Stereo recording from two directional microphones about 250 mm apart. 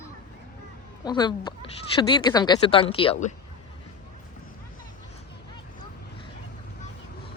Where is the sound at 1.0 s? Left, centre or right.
Centre.